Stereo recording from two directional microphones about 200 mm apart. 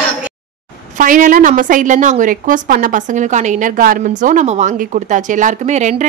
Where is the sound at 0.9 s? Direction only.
40° right (ahead or behind).